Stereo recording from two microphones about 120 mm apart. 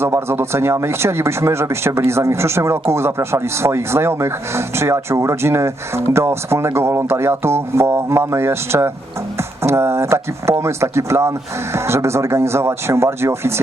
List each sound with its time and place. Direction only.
0.0 s speech: 20° right (ahead or behind)